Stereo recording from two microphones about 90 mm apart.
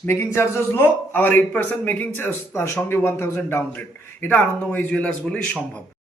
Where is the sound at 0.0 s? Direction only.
30° left (ahead or behind); by 5.4 s 15° left (ahead or behind).